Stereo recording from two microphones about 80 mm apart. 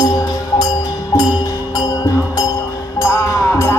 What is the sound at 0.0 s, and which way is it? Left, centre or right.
Music, left.